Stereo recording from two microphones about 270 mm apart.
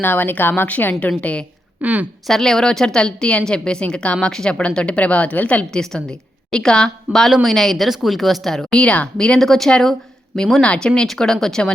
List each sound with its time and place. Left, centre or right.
0.0 s a woman's voice: centre